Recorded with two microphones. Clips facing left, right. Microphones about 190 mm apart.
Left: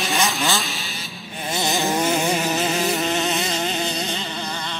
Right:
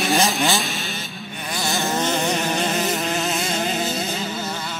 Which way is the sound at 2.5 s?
Centre (ahead or behind).